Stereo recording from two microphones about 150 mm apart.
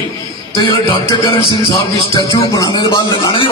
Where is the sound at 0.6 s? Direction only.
30° left (ahead or behind).